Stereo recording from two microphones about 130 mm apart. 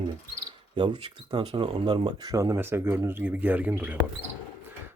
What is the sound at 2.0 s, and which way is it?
Speech, 30° right (ahead or behind).